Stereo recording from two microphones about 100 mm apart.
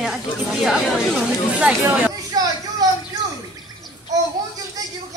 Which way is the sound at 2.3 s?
40° right (ahead or behind).